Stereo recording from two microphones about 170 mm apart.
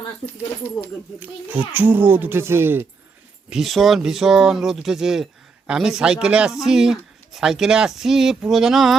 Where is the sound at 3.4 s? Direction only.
Centre (ahead or behind).